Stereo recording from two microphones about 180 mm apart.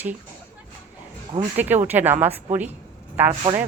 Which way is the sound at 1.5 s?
10° right (ahead or behind).